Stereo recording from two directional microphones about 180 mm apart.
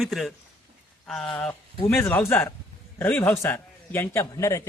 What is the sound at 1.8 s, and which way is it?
A man's voice, 10° left (ahead or behind).